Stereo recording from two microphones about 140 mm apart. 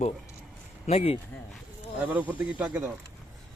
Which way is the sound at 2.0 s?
10° right (ahead or behind).